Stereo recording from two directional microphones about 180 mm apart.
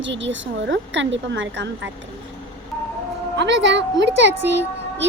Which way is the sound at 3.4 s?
80° right.